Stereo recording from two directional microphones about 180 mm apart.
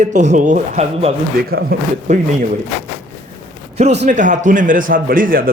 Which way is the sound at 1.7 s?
55° right (ahead or behind).